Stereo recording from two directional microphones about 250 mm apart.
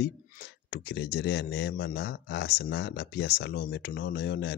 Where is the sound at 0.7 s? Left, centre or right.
Left.